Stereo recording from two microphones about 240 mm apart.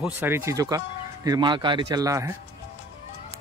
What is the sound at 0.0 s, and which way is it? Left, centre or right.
Speech, centre.